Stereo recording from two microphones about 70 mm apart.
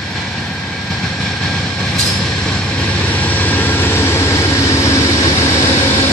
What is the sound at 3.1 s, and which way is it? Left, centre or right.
Vehicle, left.